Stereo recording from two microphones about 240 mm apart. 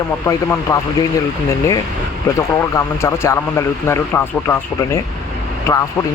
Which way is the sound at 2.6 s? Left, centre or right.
Centre.